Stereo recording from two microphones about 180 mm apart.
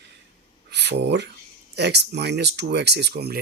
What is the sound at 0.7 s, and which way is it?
Speech, 70° right (ahead or behind).